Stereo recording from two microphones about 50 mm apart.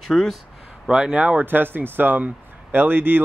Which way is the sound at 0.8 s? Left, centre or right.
Centre.